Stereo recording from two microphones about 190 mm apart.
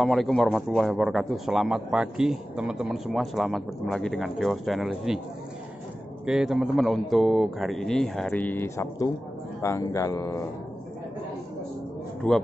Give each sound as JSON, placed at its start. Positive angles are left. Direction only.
{"t": 0.0, "sound": "a man's voice", "side_deg": 0}
{"t": 6.2, "sound": "a man's voice", "side_deg": -5}
{"t": 12.2, "sound": "a man's voice", "side_deg": 5}